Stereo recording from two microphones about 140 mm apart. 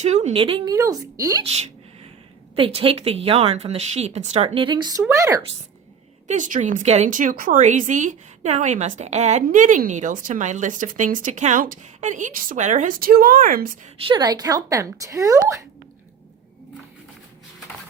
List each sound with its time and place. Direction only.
0.0 s a woman's voice: 50° right (ahead or behind)
0.7 s speech: 25° right (ahead or behind)
1.5 s speech: 50° right (ahead or behind)
2.6 s speech: 40° right (ahead or behind); by 5.4 s 20° right (ahead or behind)
6.2 s speech: 65° right (ahead or behind); by 13.7 s 90° right
14.0 s speech: 35° right (ahead or behind)